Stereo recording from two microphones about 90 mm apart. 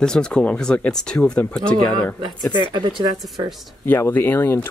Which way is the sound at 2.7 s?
60° right (ahead or behind).